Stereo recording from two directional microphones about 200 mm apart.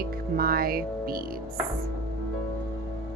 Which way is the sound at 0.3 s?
50° right (ahead or behind).